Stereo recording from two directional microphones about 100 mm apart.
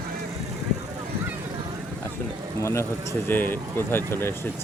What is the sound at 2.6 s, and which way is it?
Speech, 25° left (ahead or behind).